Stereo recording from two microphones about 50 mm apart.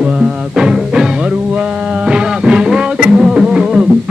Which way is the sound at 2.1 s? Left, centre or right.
Centre.